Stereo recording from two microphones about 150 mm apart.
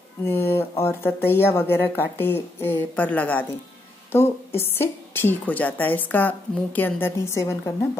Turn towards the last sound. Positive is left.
turn(degrees=20)  # may be behind; listen again after turning